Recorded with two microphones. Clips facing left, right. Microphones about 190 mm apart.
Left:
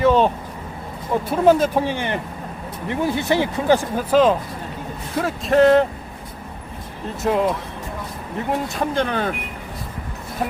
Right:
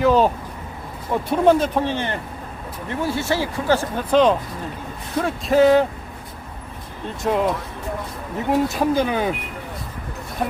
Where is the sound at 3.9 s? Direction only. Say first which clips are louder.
Even; 5° left (ahead or behind).